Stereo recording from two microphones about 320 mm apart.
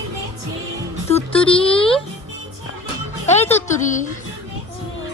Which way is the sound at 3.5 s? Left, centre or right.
Left.